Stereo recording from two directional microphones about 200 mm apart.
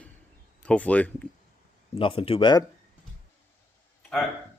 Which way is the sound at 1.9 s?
25° left (ahead or behind).